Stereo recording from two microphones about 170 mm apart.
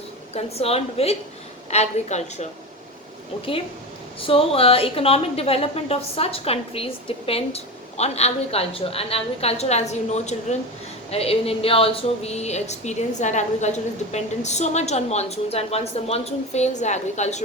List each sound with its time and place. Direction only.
0.3 s a woman's voice: 35° left (ahead or behind)
4.2 s a woman's voice: 35° left (ahead or behind)